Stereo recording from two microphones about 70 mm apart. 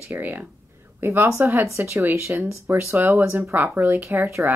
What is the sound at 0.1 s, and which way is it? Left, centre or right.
Speech, right.